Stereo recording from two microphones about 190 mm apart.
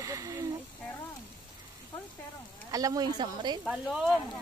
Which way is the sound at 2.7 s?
20° right (ahead or behind).